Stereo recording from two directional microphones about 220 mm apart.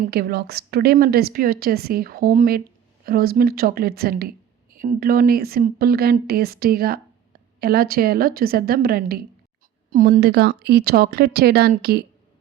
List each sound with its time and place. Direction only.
0.0 s a woman's voice: 45° right (ahead or behind)